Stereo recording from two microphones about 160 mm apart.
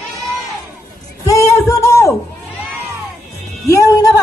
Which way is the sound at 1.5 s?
15° left (ahead or behind).